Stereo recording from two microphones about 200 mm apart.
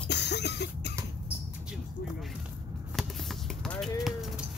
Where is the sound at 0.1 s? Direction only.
55° left (ahead or behind).